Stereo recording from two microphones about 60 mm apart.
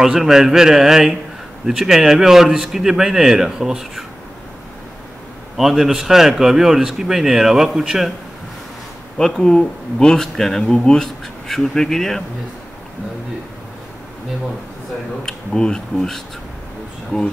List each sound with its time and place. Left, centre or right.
0.0 s speech: centre
5.6 s speech: centre
9.2 s speech: centre
15.2 s speech: centre